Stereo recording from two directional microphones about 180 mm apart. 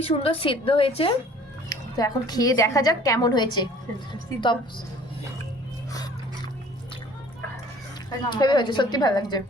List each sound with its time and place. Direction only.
0.0 s a woman's voice: 30° left (ahead or behind)
1.7 s a woman's voice: 20° left (ahead or behind)
5.9 s a sound: 20° left (ahead or behind)
8.3 s a woman's voice: 25° left (ahead or behind)